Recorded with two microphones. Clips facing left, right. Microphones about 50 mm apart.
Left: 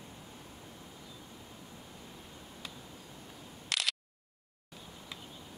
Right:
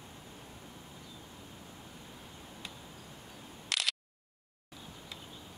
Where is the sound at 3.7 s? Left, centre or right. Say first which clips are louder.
Even; centre.